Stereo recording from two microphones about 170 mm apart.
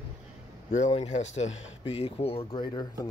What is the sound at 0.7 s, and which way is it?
Speech, 45° left (ahead or behind).